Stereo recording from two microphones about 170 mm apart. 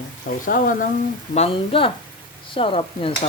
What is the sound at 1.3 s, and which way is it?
Speech, 35° left (ahead or behind).